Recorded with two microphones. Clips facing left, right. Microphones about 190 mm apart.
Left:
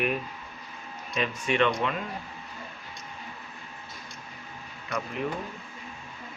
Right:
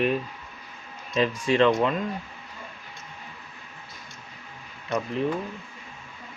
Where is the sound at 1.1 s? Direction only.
35° right (ahead or behind).